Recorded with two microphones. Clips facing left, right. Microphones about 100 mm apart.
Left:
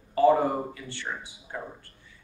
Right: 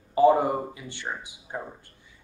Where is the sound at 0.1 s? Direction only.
15° right (ahead or behind).